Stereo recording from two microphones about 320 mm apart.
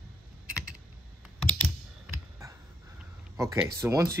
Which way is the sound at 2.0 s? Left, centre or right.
Centre.